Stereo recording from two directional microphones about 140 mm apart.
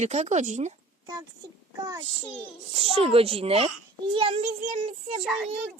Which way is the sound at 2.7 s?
45° right (ahead or behind).